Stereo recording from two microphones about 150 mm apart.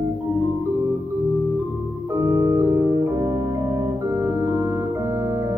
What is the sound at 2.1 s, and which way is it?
Organ, 25° right (ahead or behind).